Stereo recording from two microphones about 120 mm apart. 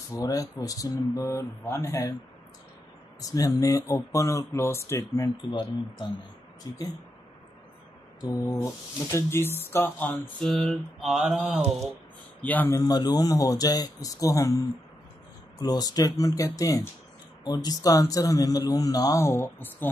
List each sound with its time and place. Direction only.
0.1 s a man's voice: 30° left (ahead or behind)
3.2 s a man's voice: 30° left (ahead or behind)
5.5 s speech: 35° left (ahead or behind)
8.2 s a man's voice: 25° left (ahead or behind)
10.4 s mantra: 5° left (ahead or behind)
11.5 s mantra: 5° left (ahead or behind)
12.4 s speech: 15° left (ahead or behind)
12.7 s a man's voice: 30° left (ahead or behind)